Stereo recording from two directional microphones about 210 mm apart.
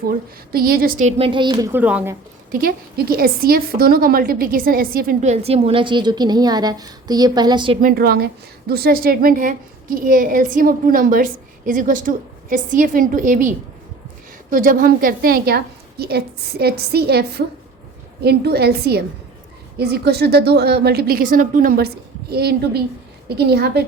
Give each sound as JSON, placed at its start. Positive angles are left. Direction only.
{"t": 0.5, "sound": "a woman's voice", "side_deg": -45}
{"t": 1.7, "sound": "a woman's voice", "side_deg": -5}
{"t": 2.5, "sound": "a woman's voice", "side_deg": -45}
{"t": 7.8, "sound": "a woman's voice", "side_deg": -45}
{"t": 14.5, "sound": "a woman's voice", "side_deg": -40}